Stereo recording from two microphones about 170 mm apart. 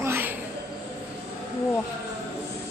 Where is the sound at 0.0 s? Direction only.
10° right (ahead or behind).